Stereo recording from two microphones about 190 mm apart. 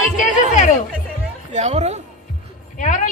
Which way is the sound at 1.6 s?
35° right (ahead or behind).